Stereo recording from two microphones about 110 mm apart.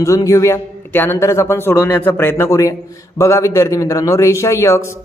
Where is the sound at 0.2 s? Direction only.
30° left (ahead or behind).